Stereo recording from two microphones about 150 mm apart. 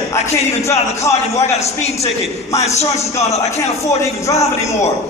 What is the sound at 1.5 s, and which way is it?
Speech, 45° left (ahead or behind).